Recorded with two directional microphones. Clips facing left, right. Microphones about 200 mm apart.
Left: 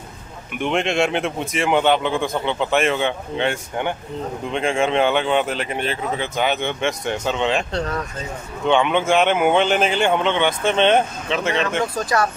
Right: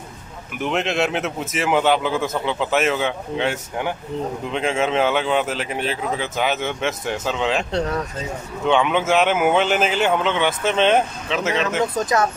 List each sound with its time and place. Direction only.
0.6 s speech: centre (ahead or behind)
8.6 s speech: centre (ahead or behind)
11.9 s speech: 20° right (ahead or behind)